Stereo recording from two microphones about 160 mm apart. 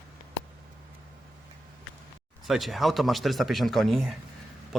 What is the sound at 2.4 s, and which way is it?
Speech, centre (ahead or behind).